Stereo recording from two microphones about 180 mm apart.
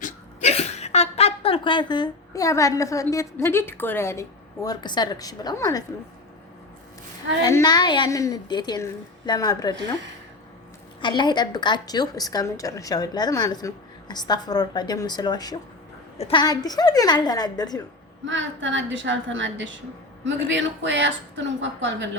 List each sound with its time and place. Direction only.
0.0 s speech: 40° left (ahead or behind); by 5.8 s 20° left (ahead or behind)
7.4 s a woman's voice: 20° left (ahead or behind)
11.0 s a woman's voice: 25° left (ahead or behind)
18.3 s a woman's voice: 90° right